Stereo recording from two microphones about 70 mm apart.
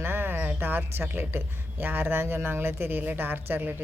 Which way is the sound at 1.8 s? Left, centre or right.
Right.